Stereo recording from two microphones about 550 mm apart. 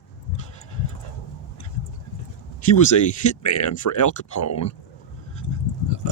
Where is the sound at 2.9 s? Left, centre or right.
Left.